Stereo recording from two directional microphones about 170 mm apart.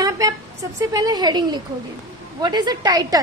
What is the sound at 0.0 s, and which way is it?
A woman's voice, 20° right (ahead or behind).